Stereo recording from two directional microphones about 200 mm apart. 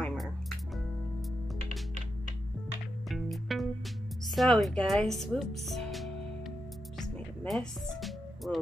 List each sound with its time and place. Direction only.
0.0 s music: 5° left (ahead or behind)
3.1 s music: centre (ahead or behind)
4.4 s speech: centre (ahead or behind)
7.0 s music: centre (ahead or behind)